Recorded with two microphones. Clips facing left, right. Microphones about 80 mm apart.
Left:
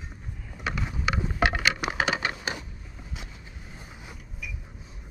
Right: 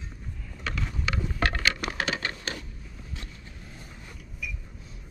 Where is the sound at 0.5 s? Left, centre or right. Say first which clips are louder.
Left 2 dB; centre.